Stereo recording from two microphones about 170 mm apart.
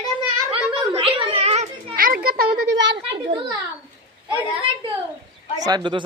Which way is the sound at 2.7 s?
90° right.